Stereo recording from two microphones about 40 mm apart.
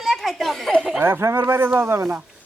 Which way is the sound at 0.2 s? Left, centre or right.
Centre.